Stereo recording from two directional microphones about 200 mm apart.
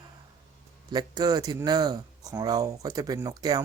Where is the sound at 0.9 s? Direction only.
20° right (ahead or behind).